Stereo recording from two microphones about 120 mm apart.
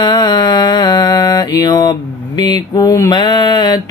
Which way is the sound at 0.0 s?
40° left (ahead or behind).